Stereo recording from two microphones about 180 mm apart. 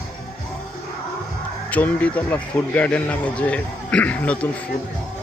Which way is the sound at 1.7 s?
10° left (ahead or behind).